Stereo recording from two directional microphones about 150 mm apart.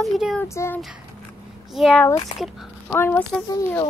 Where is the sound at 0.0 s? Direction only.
Centre (ahead or behind).